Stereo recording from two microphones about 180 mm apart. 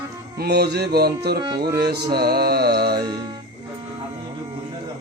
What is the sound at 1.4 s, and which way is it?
Music, 25° right (ahead or behind).